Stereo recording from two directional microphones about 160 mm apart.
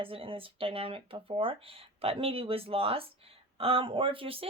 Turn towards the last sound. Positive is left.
turn(degrees=-35)  # may be behind; listen again after turning